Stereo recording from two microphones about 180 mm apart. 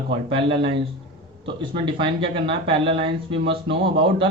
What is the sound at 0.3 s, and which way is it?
Speech, 30° right (ahead or behind).